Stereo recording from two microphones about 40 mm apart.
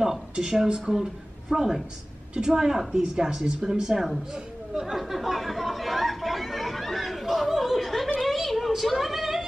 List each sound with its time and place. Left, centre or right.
0.7 s a woman's voice: centre
4.9 s chatter: centre
8.2 s a sound: centre